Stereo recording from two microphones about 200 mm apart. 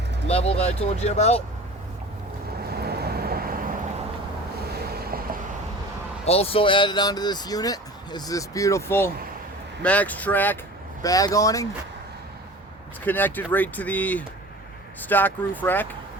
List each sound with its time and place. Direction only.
0.3 s speech: 30° left (ahead or behind)
2.6 s vehicle: 50° right (ahead or behind)
4.9 s vehicle: 50° right (ahead or behind)
6.2 s speech: 30° left (ahead or behind)
13.1 s speech: 10° left (ahead or behind)